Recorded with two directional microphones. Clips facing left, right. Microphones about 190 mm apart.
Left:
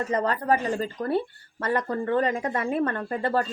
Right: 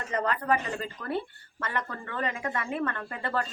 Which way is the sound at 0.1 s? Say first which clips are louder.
Left 2 dB; 35° left (ahead or behind).